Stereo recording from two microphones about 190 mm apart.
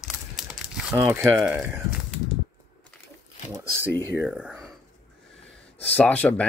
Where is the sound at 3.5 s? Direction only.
15° right (ahead or behind).